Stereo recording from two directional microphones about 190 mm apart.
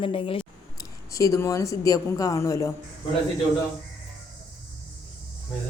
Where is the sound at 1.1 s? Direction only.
15° left (ahead or behind).